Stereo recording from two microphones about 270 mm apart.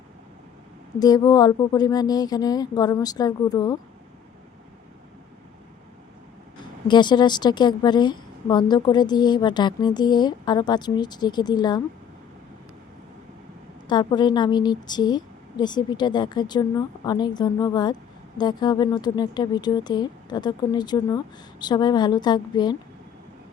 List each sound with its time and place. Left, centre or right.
0.9 s a woman's voice: centre
6.6 s a woman's voice: centre
13.8 s a woman's voice: centre